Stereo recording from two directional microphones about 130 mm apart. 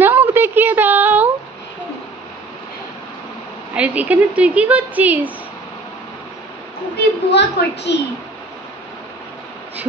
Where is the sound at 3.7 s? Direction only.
10° right (ahead or behind).